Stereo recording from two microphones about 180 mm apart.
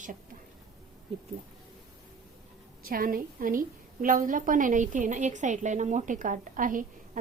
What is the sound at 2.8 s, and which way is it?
A woman's voice, 55° right (ahead or behind).